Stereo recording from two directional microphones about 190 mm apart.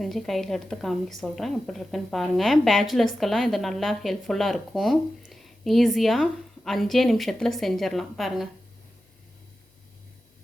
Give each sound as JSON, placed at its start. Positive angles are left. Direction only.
{"t": 0.0, "sound": "a woman's voice", "side_deg": 0}